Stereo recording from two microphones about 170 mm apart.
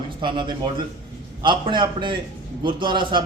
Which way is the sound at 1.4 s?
30° right (ahead or behind).